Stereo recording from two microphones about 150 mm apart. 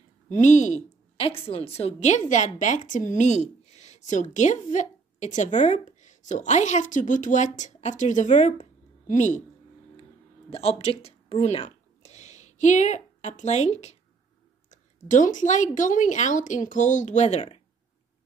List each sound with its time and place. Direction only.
0.3 s speech: 50° left (ahead or behind)
1.1 s a woman's voice: 40° left (ahead or behind); by 9.4 s 55° left (ahead or behind)
10.5 s a woman's voice: 45° left (ahead or behind)